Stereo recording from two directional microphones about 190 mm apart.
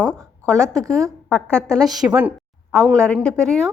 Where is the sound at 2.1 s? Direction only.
10° right (ahead or behind).